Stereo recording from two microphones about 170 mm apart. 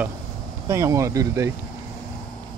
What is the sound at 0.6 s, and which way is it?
Speech, 15° right (ahead or behind).